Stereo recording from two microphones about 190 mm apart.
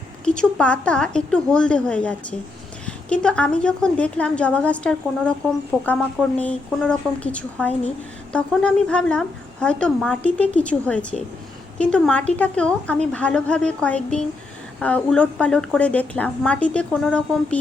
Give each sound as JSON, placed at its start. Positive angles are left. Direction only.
{"t": 0.3, "sound": "a woman's voice", "side_deg": 5}